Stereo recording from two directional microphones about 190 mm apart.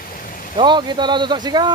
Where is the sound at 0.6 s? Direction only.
25° right (ahead or behind).